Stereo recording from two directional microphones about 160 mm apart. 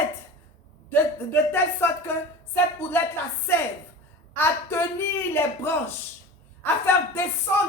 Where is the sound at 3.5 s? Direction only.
15° left (ahead or behind).